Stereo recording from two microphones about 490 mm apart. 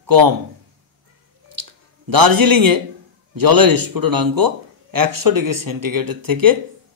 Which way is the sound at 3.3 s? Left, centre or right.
Right.